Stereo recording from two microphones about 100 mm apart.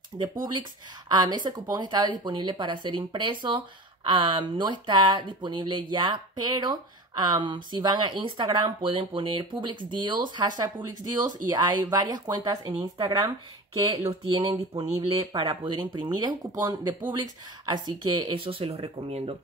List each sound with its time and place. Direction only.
0.1 s speech: 55° right (ahead or behind); by 14.6 s 40° right (ahead or behind)
14.8 s speech: 75° right (ahead or behind)
15.6 s speech: 50° right (ahead or behind); by 19.3 s 80° right